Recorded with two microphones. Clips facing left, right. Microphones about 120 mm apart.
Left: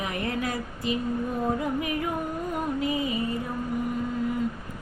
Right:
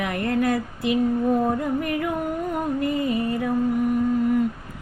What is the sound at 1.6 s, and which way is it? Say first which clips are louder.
Music: right 4 dB; 55° right (ahead or behind).